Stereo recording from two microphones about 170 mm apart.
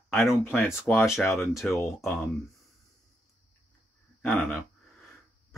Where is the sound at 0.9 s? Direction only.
Centre (ahead or behind).